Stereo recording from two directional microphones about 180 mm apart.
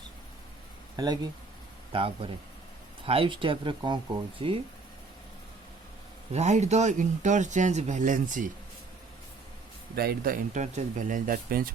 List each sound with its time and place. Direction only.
0.9 s speech: 20° right (ahead or behind)
6.3 s speech: 40° right (ahead or behind)
9.9 s speech: 60° right (ahead or behind)